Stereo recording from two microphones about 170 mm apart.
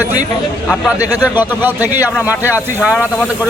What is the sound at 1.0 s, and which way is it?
Speech, 20° left (ahead or behind).